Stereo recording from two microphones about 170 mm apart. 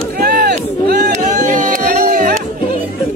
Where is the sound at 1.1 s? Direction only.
45° right (ahead or behind).